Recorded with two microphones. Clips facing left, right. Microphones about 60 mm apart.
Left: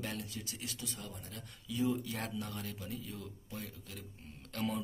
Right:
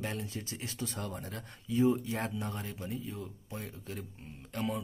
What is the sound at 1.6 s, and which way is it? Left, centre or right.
Speech, right.